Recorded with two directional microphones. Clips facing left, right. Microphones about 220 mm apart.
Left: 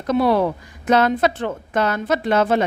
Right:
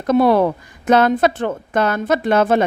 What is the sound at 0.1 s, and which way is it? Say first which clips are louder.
A woman's voice: right 4 dB; 50° right (ahead or behind).